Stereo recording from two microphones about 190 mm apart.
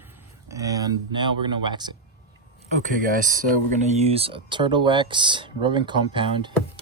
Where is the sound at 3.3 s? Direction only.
40° right (ahead or behind).